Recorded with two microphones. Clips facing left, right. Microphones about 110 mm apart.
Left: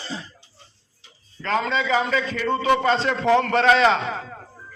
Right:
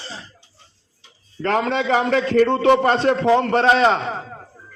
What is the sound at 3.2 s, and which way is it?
A man's voice, 35° right (ahead or behind).